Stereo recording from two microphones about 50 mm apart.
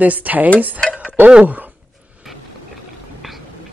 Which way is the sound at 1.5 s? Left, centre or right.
Right.